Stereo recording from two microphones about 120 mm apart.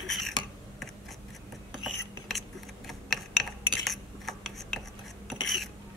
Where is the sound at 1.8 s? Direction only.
Centre (ahead or behind).